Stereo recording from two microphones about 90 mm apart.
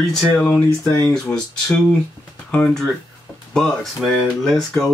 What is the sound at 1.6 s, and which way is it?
Speech, 15° left (ahead or behind).